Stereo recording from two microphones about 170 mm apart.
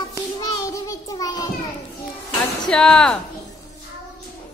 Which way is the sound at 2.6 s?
5° left (ahead or behind).